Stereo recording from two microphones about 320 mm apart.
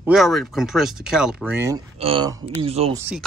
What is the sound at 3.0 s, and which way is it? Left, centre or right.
Speech, centre.